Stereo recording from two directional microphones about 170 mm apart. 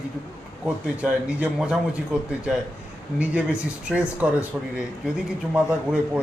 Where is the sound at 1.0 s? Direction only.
5° right (ahead or behind).